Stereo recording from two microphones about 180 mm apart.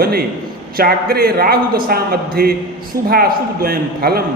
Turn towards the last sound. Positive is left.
turn(degrees=-55)  # may be behind; listen again after turning